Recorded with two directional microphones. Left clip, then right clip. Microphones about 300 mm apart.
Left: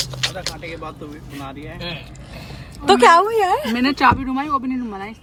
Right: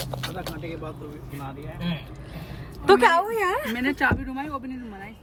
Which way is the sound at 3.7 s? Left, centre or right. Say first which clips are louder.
Left 8 dB; centre.